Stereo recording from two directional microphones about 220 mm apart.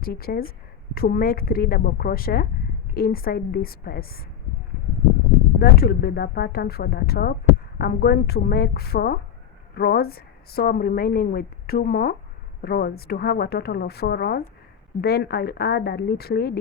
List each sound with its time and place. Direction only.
0.0 s a woman's voice: 45° left (ahead or behind)
5.5 s a woman's voice: 45° left (ahead or behind)